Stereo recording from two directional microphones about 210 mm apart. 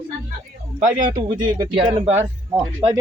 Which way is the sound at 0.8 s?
35° right (ahead or behind).